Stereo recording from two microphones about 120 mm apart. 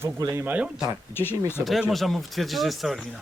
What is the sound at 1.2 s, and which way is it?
Speech, 20° left (ahead or behind).